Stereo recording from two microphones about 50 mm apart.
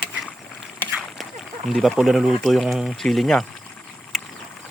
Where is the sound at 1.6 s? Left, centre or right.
Centre.